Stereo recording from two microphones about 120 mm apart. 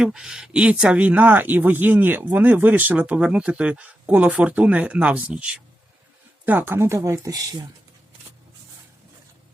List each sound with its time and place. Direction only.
0.0 s speech: 5° right (ahead or behind); by 7.7 s 30° right (ahead or behind)